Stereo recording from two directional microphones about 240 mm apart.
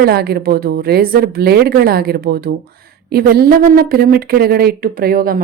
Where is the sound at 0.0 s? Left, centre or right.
Right.